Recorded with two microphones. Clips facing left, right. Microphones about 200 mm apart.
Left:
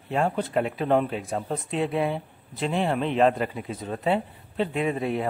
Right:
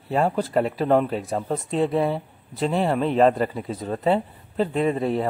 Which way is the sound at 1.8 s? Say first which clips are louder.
Right 4 dB; 35° right (ahead or behind).